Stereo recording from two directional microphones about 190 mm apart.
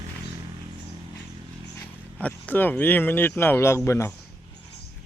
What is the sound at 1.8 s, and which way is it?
Speech, 10° left (ahead or behind).